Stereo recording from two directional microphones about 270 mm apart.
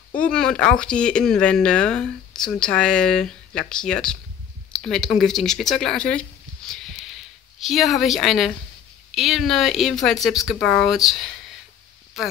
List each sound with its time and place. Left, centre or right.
0.2 s speech: centre
6.7 s a sound: centre
9.1 s speech: centre